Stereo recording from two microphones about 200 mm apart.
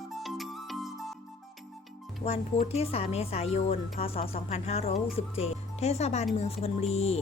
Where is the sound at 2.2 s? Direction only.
30° left (ahead or behind).